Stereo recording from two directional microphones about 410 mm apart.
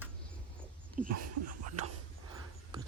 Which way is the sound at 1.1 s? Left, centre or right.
Right.